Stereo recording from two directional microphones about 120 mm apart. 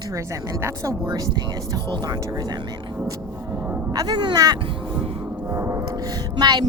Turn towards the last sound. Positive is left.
turn(degrees=-35)  # may be behind; listen again after turning